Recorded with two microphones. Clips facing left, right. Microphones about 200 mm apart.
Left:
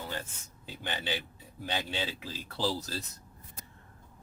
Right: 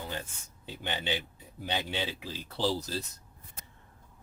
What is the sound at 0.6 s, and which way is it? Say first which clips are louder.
Speech: right 2 dB; 20° right (ahead or behind).